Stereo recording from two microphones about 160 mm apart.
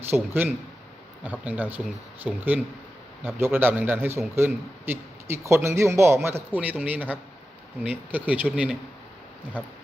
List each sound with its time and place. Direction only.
0.0 s a man's voice: 10° right (ahead or behind)